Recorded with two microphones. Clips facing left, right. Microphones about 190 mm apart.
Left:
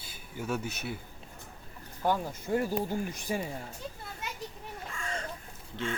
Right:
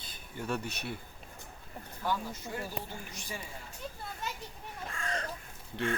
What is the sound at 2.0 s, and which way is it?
Speech, 50° left (ahead or behind).